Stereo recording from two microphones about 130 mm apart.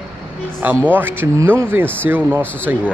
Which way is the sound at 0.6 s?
15° right (ahead or behind).